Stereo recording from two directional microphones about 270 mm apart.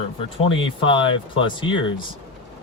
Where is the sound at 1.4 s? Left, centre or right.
Centre.